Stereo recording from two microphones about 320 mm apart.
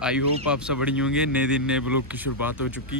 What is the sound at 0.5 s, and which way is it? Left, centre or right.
Speech, centre.